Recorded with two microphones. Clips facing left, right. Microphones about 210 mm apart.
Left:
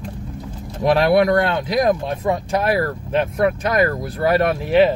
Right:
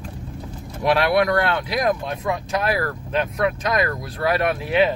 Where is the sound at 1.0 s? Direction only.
25° left (ahead or behind).